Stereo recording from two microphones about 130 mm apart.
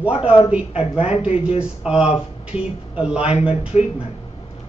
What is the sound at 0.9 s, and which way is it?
Speech, 50° left (ahead or behind).